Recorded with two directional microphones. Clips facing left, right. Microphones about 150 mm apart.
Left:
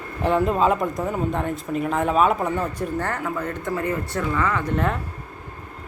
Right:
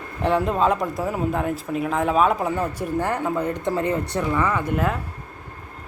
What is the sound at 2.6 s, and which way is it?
Speech, 10° right (ahead or behind).